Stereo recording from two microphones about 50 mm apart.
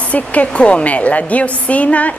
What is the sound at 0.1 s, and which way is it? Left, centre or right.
Speech, left.